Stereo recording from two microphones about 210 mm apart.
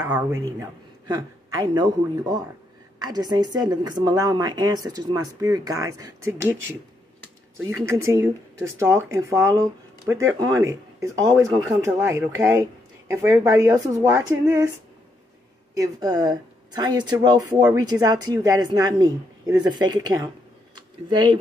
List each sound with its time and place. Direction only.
0.6 s a man's voice: 20° right (ahead or behind)
7.8 s speech: 15° right (ahead or behind)
15.7 s speech: 15° right (ahead or behind)
20.7 s a sound: 20° right (ahead or behind)